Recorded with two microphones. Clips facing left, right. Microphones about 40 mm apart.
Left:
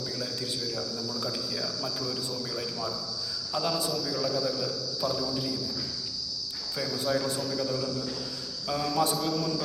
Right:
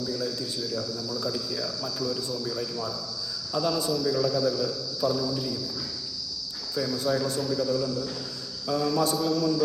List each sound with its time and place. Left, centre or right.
0.0 s a sound: centre
1.2 s a man's voice: centre
3.8 s a man's voice: centre
6.8 s a man's voice: centre